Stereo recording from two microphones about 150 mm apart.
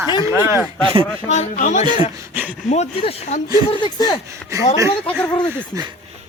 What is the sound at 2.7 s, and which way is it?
Speech, 45° left (ahead or behind).